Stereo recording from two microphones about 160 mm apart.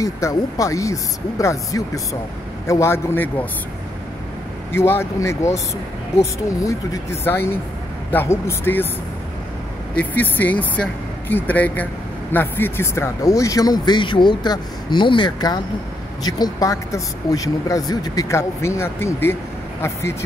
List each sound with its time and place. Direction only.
0.0 s speech: 20° left (ahead or behind)
4.7 s speech: 15° left (ahead or behind)
9.9 s speech: 10° left (ahead or behind)